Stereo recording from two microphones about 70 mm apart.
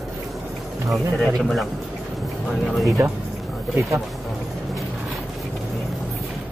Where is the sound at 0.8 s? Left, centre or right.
Centre.